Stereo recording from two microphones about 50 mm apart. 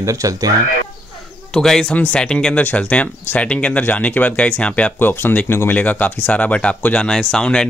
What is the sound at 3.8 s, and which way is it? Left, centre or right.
Speech, left.